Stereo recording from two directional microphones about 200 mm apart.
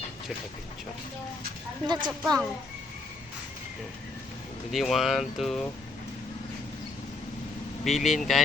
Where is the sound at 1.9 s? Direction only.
20° right (ahead or behind).